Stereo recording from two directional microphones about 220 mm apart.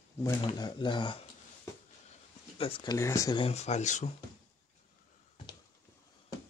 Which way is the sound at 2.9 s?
15° left (ahead or behind).